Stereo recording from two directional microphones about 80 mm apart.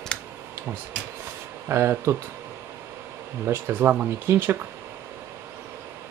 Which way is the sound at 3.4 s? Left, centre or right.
Right.